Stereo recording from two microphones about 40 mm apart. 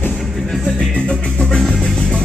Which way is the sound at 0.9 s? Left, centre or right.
Left.